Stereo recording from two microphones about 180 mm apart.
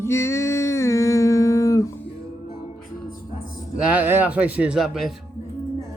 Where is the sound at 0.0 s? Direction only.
15° left (ahead or behind).